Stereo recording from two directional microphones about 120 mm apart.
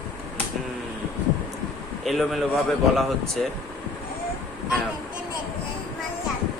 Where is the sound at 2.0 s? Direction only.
Centre (ahead or behind).